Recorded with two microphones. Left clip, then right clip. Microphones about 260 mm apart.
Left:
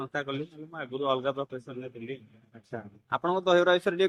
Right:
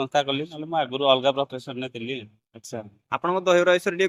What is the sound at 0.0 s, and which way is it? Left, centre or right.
A man's voice, right.